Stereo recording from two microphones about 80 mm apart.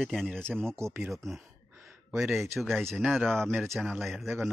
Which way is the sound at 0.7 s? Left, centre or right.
Right.